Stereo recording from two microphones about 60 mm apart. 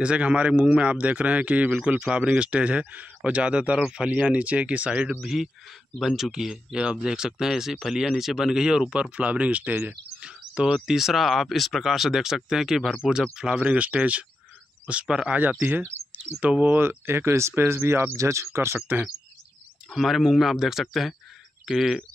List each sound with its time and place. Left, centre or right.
0.0 s speech: centre
5.2 s speech: centre; by 10.3 s right
10.5 s speech: centre
13.4 s speech: centre
15.6 s speech: right
16.7 s speech: right
18.1 s speech: right
20.0 s speech: centre